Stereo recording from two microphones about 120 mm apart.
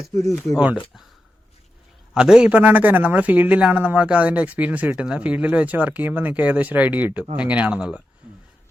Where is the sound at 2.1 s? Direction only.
5° right (ahead or behind).